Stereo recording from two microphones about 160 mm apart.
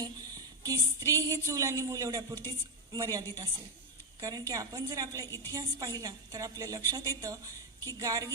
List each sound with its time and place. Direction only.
0.6 s a sound: 25° right (ahead or behind)
1.1 s speech: 20° right (ahead or behind)
5.2 s a woman's voice: 15° left (ahead or behind)
5.5 s speech: 20° right (ahead or behind)